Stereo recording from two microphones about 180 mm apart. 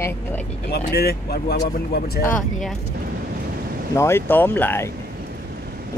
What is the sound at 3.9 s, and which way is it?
Speech, 15° left (ahead or behind).